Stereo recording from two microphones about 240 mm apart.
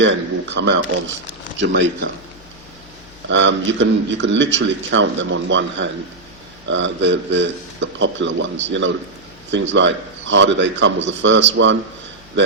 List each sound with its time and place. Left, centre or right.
0.0 s speech: right
3.2 s speech: right